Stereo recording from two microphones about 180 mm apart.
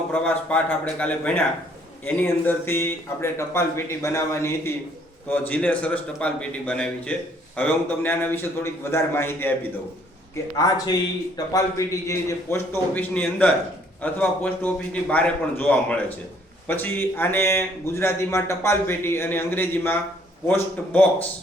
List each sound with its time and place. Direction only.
0.1 s a man's voice: 5° left (ahead or behind)
10.6 s a man's voice: 20° left (ahead or behind)